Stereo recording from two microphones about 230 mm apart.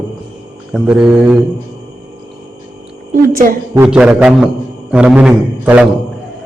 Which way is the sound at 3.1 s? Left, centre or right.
Right.